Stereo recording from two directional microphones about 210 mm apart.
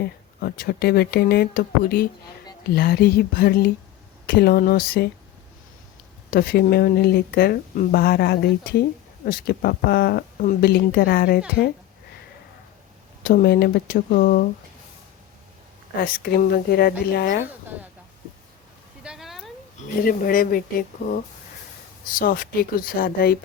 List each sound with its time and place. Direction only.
0.0 s speech: 45° left (ahead or behind)
6.3 s speech: 45° left (ahead or behind)
13.2 s speech: 45° left (ahead or behind)
16.0 s speech: 45° left (ahead or behind)
19.0 s a sound: centre (ahead or behind)
20.1 s speech: 45° left (ahead or behind)
22.2 s speech: 40° left (ahead or behind)